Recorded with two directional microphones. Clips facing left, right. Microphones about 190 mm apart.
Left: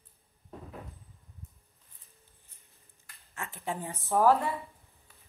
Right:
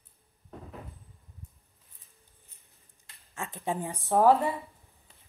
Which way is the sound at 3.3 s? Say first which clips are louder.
Right 4 dB; 20° right (ahead or behind).